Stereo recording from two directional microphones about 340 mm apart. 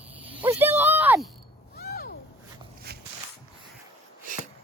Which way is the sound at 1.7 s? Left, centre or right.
Left.